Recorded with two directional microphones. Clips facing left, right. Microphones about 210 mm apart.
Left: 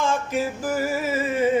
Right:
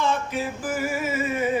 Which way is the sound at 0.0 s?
45° left (ahead or behind).